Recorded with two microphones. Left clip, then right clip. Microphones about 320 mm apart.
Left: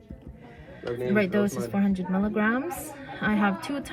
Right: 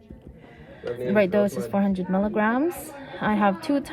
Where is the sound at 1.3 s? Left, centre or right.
Right.